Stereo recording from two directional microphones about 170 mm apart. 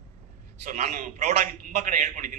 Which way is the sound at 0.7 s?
45° right (ahead or behind).